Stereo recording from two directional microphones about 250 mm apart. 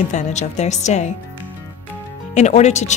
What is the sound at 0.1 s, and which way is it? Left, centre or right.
A woman's voice, left.